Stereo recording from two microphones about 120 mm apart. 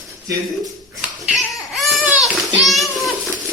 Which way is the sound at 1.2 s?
Centre (ahead or behind).